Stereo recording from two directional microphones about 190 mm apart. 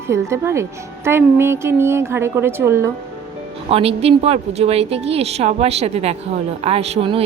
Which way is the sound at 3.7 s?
30° right (ahead or behind).